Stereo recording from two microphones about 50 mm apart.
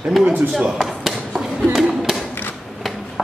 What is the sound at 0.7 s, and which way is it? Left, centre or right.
Chop, centre.